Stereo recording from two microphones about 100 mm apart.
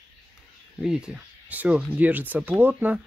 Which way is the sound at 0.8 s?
5° right (ahead or behind).